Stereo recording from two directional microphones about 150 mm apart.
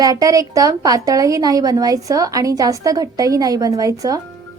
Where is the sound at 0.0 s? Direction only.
25° right (ahead or behind).